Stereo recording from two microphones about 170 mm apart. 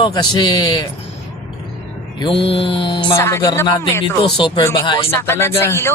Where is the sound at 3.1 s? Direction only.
15° left (ahead or behind).